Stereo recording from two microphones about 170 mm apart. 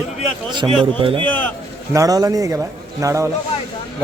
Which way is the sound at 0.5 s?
30° right (ahead or behind).